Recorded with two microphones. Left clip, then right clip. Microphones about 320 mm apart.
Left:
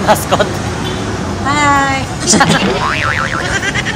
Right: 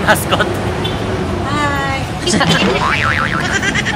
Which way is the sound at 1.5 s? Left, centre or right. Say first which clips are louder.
Left 7 dB; left.